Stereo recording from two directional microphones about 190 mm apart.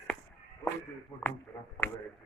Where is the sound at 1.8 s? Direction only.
10° left (ahead or behind).